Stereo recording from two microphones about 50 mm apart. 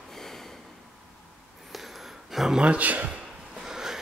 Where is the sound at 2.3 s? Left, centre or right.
Centre.